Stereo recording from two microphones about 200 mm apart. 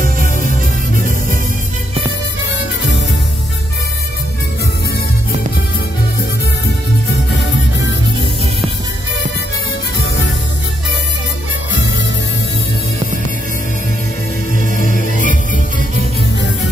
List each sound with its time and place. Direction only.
0.0 s music: 45° right (ahead or behind)
14.8 s music: 40° left (ahead or behind)